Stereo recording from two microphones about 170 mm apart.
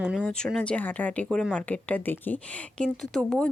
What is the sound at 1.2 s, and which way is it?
Speech, 5° right (ahead or behind).